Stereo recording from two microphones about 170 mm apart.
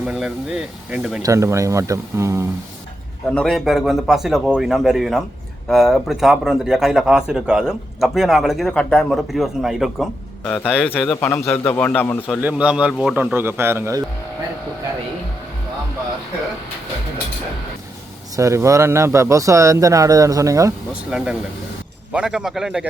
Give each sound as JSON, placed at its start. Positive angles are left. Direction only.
{"t": 0.0, "sound": "speech", "side_deg": -5}
{"t": 1.2, "sound": "speech", "side_deg": -15}
{"t": 3.3, "sound": "speech", "side_deg": 0}
{"t": 10.4, "sound": "a man's voice", "side_deg": 10}
{"t": 12.4, "sound": "speech", "side_deg": -10}
{"t": 13.1, "sound": "speech", "side_deg": -15}
{"t": 18.3, "sound": "speech", "side_deg": -15}
{"t": 20.9, "sound": "speech", "side_deg": -5}